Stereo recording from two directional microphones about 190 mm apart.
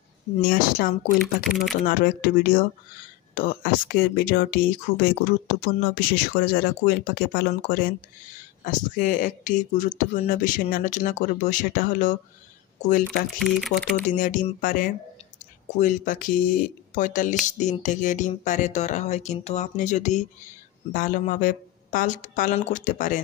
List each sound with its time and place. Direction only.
0.4 s speech: 50° left (ahead or behind)
1.2 s speech: centre (ahead or behind)
1.9 s speech: 50° left (ahead or behind)
13.4 s speech: centre (ahead or behind)
14.1 s speech: 40° left (ahead or behind)